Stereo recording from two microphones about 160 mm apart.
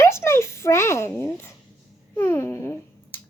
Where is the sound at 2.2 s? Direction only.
15° left (ahead or behind).